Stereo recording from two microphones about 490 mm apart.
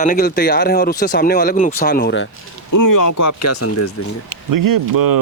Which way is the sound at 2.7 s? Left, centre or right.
Left.